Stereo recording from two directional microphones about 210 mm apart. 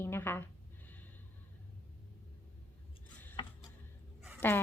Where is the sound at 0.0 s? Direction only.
10° left (ahead or behind).